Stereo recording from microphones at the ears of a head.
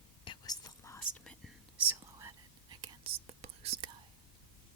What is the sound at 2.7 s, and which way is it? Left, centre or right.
Whispering, right.